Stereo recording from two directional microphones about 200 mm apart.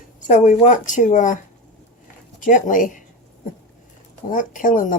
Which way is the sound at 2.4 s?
40° left (ahead or behind).